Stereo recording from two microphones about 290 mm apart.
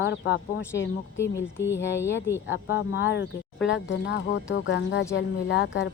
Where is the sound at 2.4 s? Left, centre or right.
Left.